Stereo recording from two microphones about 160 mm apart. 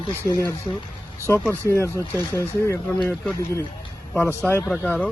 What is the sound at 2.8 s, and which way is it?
Speech, 5° left (ahead or behind).